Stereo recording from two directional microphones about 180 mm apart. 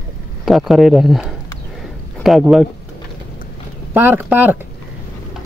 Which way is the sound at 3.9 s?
10° right (ahead or behind).